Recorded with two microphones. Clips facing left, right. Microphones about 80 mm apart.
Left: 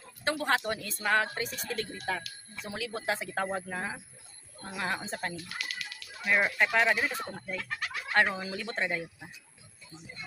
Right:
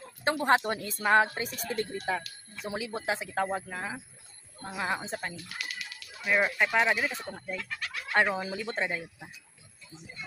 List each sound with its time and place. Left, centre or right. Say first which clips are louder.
0.2 s speech: right 4 dB; right
3.1 s speech: right 2 dB; centre
4.6 s speech: right 2 dB; centre
5.0 s speech: even; centre